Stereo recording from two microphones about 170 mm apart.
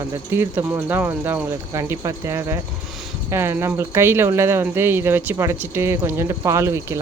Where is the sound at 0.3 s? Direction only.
10° right (ahead or behind).